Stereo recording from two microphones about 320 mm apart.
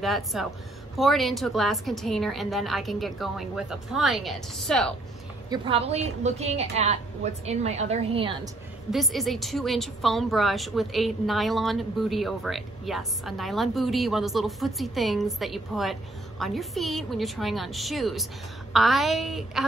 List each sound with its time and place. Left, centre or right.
0.0 s a woman's voice: centre
5.5 s a woman's voice: centre
8.9 s a woman's voice: centre